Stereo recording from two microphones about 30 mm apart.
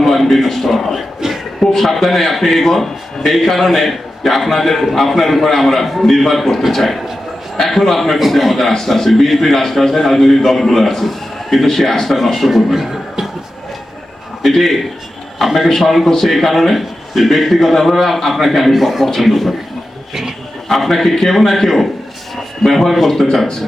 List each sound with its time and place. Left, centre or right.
0.0 s a man's voice: centre
0.9 s a sound: centre
1.7 s a man's voice: centre
12.5 s speech: centre
14.4 s a man's voice: centre
20.7 s a man's voice: centre
22.6 s a man's voice: centre